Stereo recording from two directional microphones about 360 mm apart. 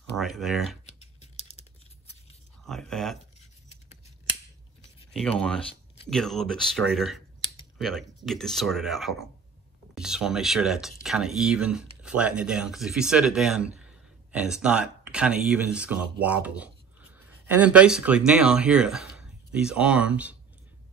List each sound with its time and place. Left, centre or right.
0.1 s speech: centre
0.8 s scissors: centre
2.6 s speech: centre
6.0 s speech: centre